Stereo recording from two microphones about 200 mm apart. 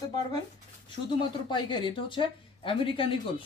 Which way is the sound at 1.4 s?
25° left (ahead or behind).